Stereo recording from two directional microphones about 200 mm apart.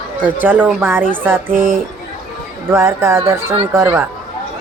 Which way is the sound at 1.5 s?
45° right (ahead or behind).